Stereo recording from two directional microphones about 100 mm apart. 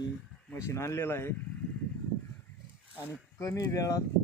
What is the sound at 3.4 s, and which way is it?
Speech, 35° left (ahead or behind).